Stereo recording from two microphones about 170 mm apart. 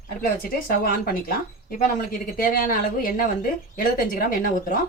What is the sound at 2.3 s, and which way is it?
Speech, 55° left (ahead or behind).